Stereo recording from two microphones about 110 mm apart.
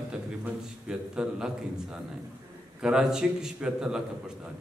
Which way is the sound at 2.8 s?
5° right (ahead or behind).